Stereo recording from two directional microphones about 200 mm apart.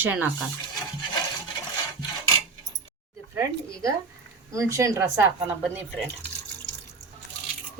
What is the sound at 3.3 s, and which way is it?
Speech, 15° right (ahead or behind).